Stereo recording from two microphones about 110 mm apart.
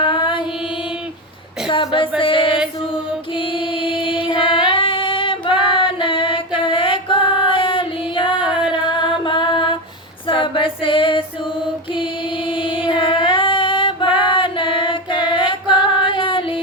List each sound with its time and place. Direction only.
0.0 s mantra: 50° left (ahead or behind)
1.7 s music: 50° left (ahead or behind)
4.7 s female singing: 50° left (ahead or behind)
6.6 s music: 50° left (ahead or behind)
8.4 s music: 10° right (ahead or behind)
8.7 s music: 45° left (ahead or behind)
10.2 s female singing: 50° left (ahead or behind)
12.5 s music: 50° left (ahead or behind)
13.2 s female singing: 50° left (ahead or behind)
15.3 s music: 50° left (ahead or behind)
15.6 s female singing: 10° right (ahead or behind)
16.0 s female singing: 50° left (ahead or behind)